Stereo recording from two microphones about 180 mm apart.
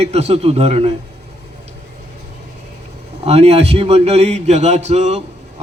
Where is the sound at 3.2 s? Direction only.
35° right (ahead or behind).